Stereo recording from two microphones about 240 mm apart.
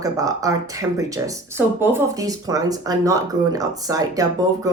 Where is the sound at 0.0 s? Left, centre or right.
Centre.